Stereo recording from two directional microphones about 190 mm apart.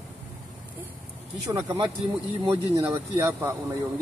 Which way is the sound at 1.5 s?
20° right (ahead or behind).